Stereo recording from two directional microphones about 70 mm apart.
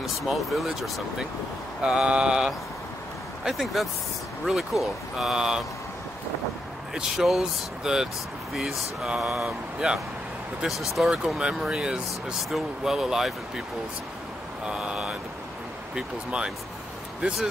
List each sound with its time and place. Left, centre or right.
0.0 s speech: centre
1.8 s speech: centre
3.4 s speech: centre
6.9 s speech: centre
14.7 s speech: centre